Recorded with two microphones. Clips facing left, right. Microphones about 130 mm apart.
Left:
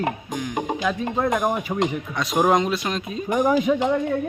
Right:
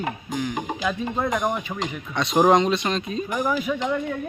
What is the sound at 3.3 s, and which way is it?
Speech, 20° left (ahead or behind).